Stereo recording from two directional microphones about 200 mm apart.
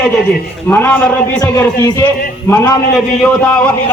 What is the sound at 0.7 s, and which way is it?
A man's voice, 10° left (ahead or behind).